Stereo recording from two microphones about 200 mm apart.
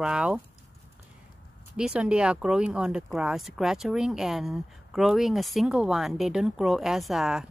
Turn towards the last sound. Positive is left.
turn(degrees=-5)  # may be behind; listen again after turning